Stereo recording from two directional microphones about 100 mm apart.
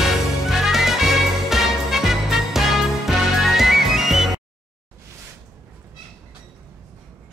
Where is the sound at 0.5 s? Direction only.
5° right (ahead or behind).